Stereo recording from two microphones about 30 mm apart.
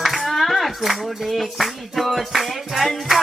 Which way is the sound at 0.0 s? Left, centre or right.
Centre.